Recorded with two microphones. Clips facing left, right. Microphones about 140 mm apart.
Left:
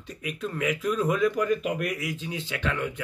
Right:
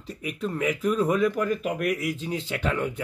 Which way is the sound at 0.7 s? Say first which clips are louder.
Right 2 dB; 5° right (ahead or behind).